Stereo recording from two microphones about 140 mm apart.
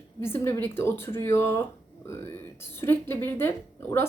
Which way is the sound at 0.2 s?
20° left (ahead or behind).